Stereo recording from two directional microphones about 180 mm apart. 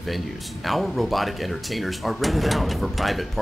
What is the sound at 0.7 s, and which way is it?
Speech, centre (ahead or behind).